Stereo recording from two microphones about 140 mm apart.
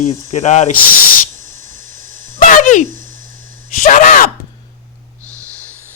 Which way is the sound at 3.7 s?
70° left (ahead or behind).